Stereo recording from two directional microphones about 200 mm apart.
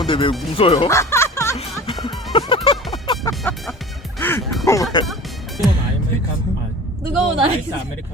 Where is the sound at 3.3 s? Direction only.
Centre (ahead or behind).